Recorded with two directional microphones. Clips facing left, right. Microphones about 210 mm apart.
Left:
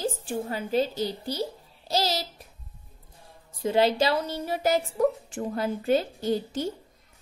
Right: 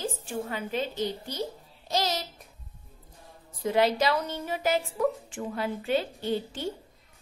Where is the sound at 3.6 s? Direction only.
30° left (ahead or behind).